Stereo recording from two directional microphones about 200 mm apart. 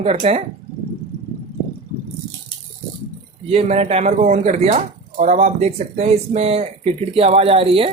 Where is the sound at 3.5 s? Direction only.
30° right (ahead or behind).